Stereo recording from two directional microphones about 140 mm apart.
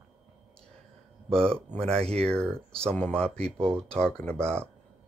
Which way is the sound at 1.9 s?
45° right (ahead or behind).